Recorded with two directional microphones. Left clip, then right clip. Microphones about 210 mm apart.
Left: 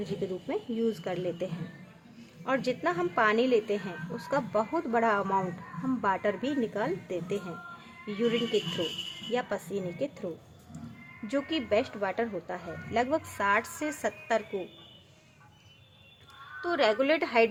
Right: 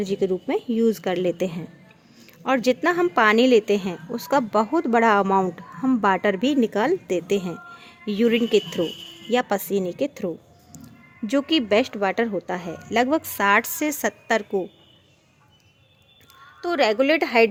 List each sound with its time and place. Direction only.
0.0 s a woman's voice: 45° right (ahead or behind)
11.3 s a woman's voice: 45° right (ahead or behind)
16.6 s speech: 40° right (ahead or behind)